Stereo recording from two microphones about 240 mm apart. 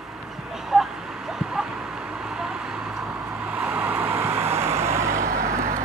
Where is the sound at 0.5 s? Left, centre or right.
Centre.